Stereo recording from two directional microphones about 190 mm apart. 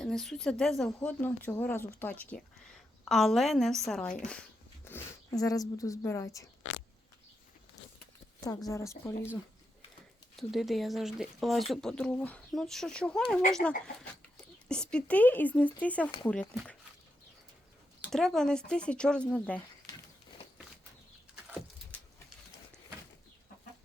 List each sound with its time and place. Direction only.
0.0 s a woman's voice: centre (ahead or behind)
4.9 s speech: 15° left (ahead or behind)
8.4 s speech: 15° left (ahead or behind)
10.3 s speech: centre (ahead or behind)
18.1 s speech: centre (ahead or behind)